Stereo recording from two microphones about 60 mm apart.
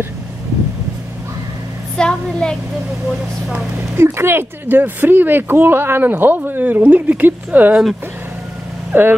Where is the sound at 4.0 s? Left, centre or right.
Right.